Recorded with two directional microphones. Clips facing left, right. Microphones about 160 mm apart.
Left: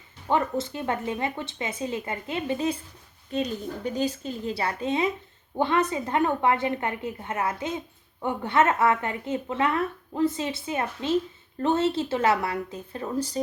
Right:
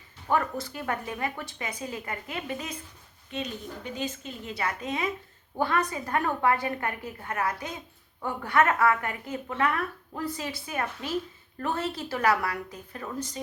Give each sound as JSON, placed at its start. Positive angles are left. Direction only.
{"t": 0.3, "sound": "a woman's voice", "side_deg": 25}